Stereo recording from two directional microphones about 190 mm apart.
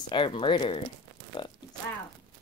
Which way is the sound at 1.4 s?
25° left (ahead or behind).